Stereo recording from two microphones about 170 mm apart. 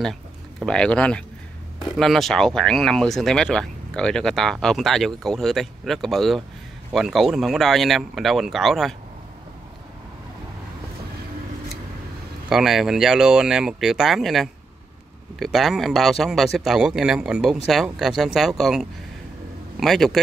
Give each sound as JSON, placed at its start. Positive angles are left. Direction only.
{"t": 0.0, "sound": "speech", "side_deg": 0}
{"t": 12.4, "sound": "speech", "side_deg": 0}